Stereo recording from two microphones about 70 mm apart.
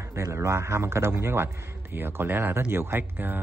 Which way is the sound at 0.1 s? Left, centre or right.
Right.